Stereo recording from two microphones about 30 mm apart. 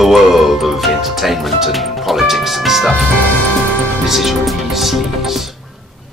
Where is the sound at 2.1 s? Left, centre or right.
Centre.